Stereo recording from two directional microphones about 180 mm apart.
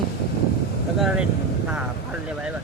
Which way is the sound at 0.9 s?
5° right (ahead or behind).